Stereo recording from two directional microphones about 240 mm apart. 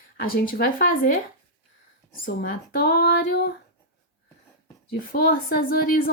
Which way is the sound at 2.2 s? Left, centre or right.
Left.